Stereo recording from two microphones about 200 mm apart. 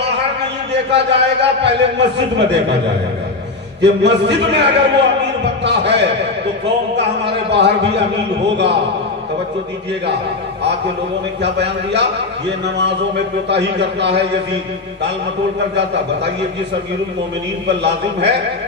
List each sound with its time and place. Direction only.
0.9 s a man's voice: 60° right (ahead or behind)
3.8 s a man's voice: 60° right (ahead or behind)
11.4 s a man's voice: 60° right (ahead or behind)
17.6 s a man's voice: 60° right (ahead or behind)